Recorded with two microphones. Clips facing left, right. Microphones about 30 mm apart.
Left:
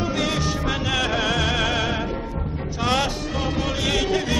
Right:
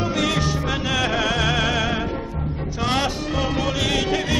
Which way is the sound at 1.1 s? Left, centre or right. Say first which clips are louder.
Right 1 dB; centre.